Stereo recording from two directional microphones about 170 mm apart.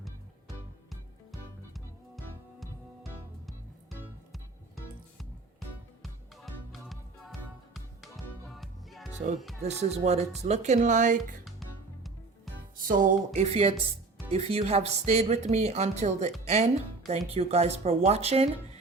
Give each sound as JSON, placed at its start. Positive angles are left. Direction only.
{"t": 0.0, "sound": "music", "side_deg": 0}
{"t": 9.6, "sound": "speech", "side_deg": -40}
{"t": 13.1, "sound": "speech", "side_deg": -40}